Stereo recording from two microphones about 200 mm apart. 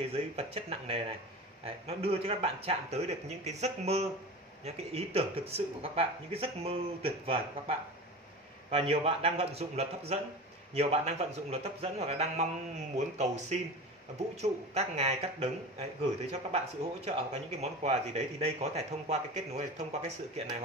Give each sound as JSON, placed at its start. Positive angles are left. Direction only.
{"t": 0.0, "sound": "speech", "side_deg": -30}